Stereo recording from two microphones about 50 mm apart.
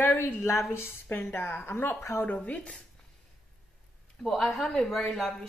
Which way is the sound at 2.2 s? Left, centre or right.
Left.